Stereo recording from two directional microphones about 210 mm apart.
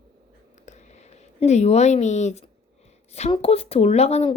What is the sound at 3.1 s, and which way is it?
A woman's voice, 30° left (ahead or behind).